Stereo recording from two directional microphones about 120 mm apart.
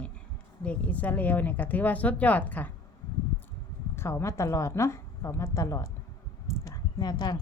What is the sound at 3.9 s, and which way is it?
A woman's voice, 20° left (ahead or behind).